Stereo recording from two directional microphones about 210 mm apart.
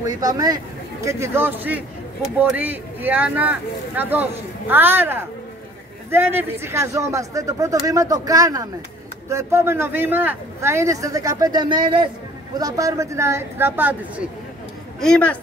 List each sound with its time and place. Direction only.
0.0 s speech: 15° right (ahead or behind)
15.0 s a woman's voice: 5° left (ahead or behind)